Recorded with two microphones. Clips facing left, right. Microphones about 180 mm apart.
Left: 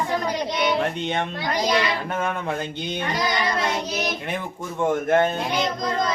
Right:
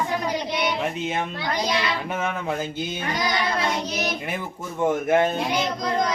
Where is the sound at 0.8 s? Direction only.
5° right (ahead or behind).